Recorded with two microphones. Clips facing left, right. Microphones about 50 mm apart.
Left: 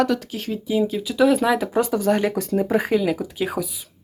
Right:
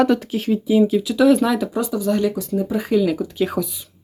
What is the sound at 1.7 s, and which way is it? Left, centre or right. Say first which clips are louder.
Speech: left 1 dB; left.